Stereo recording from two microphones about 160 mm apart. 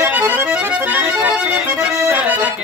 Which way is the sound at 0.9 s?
10° right (ahead or behind).